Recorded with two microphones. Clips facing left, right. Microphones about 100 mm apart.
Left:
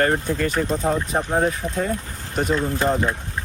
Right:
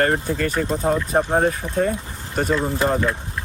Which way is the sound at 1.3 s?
35° right (ahead or behind).